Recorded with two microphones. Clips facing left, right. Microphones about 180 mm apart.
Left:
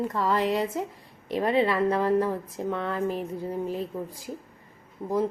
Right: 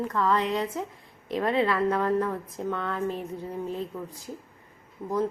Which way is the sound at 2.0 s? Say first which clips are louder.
Left 2 dB; 30° left (ahead or behind).